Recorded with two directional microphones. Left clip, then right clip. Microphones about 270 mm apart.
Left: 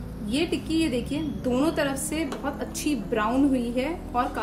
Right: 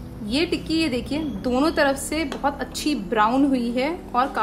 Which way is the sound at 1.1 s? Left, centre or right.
Right.